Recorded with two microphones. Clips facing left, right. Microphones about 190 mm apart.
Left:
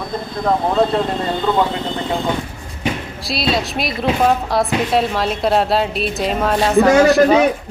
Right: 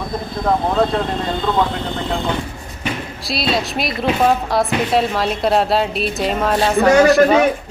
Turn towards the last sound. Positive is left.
turn(degrees=0)  # may be behind; listen again after turning